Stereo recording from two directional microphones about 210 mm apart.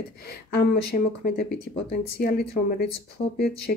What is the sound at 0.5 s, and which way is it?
Speech, 45° left (ahead or behind).